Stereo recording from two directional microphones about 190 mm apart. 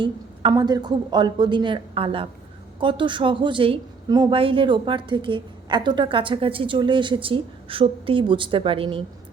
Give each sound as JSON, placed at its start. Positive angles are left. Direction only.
{"t": 0.0, "sound": "a woman's voice", "side_deg": -25}